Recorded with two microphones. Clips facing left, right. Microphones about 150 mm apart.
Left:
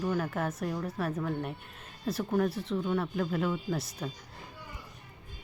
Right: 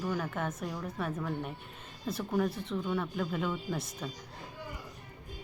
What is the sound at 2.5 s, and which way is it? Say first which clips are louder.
Speech: left 4 dB; 30° left (ahead or behind).